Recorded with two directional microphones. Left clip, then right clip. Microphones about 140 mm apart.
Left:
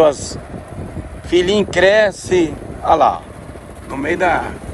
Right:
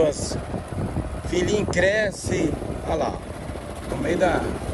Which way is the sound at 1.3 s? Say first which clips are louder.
Left 8 dB; 10° left (ahead or behind).